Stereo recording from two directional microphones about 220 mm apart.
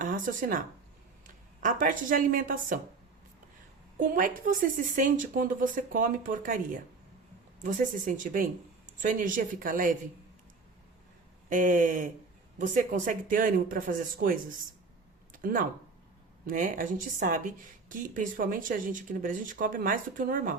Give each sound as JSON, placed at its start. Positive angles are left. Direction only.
{"t": 0.0, "sound": "speech", "side_deg": -35}
{"t": 1.6, "sound": "a woman's voice", "side_deg": -35}
{"t": 4.1, "sound": "a woman's voice", "side_deg": -40}
{"t": 7.6, "sound": "a woman's voice", "side_deg": -35}
{"t": 11.4, "sound": "a woman's voice", "side_deg": -35}
{"t": 15.3, "sound": "a sound", "side_deg": -40}
{"t": 16.5, "sound": "a woman's voice", "side_deg": -35}